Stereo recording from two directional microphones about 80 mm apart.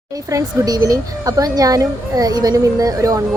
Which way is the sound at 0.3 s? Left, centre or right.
Right.